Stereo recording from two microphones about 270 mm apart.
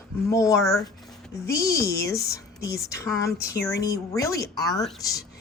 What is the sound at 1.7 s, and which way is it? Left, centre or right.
Speech, left.